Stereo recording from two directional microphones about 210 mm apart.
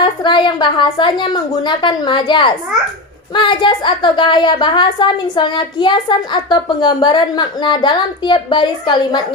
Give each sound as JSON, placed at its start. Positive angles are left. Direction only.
{"t": 0.0, "sound": "a woman's voice", "side_deg": 20}